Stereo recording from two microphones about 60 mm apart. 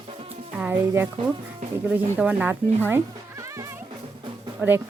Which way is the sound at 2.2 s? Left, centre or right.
Right.